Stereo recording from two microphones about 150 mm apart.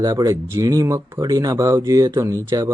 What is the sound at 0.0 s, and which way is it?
Speech, 25° right (ahead or behind).